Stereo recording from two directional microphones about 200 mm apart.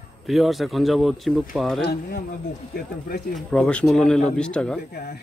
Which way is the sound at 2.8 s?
50° left (ahead or behind).